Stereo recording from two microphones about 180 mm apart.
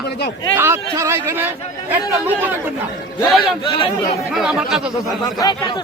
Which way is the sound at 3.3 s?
Centre (ahead or behind).